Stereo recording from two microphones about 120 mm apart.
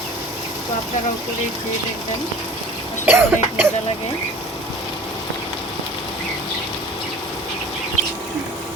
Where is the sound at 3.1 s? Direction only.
20° right (ahead or behind).